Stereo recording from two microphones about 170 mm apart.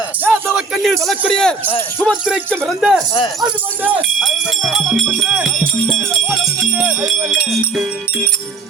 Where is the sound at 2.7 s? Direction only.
Centre (ahead or behind).